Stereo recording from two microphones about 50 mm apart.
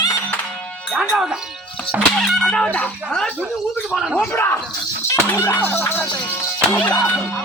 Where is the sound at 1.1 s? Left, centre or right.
Centre.